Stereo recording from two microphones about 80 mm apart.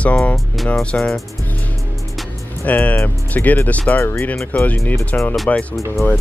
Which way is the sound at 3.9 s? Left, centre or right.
Left.